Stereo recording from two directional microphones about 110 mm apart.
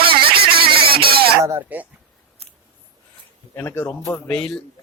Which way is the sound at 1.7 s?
15° right (ahead or behind).